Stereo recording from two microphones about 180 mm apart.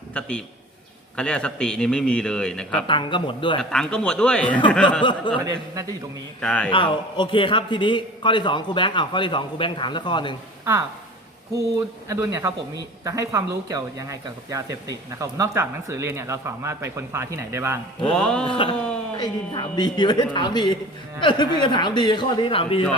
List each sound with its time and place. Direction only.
0.1 s a man's voice: 5° left (ahead or behind)
2.8 s a man's voice: 25° left (ahead or behind)
3.6 s a man's voice: 5° left (ahead or behind)
5.3 s a man's voice: 25° left (ahead or behind)
6.4 s speech: 5° left (ahead or behind)
6.7 s a man's voice: 25° left (ahead or behind)
12.0 s speech: 15° right (ahead or behind)
18.0 s a man's voice: 5° left (ahead or behind)
18.4 s a man's voice: 30° left (ahead or behind)
18.8 s a sound: 5° left (ahead or behind)
19.1 s a man's voice: 20° left (ahead or behind)